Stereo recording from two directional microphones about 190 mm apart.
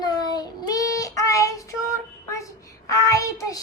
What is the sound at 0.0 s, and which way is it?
Child singing, 20° left (ahead or behind).